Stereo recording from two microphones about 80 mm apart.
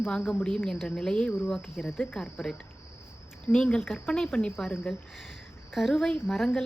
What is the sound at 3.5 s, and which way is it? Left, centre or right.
A woman's voice, centre.